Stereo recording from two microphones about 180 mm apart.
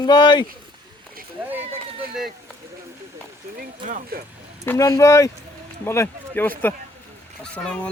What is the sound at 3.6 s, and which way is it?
Speech, 50° right (ahead or behind).